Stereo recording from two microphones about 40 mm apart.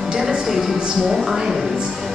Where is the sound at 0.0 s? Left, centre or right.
Centre.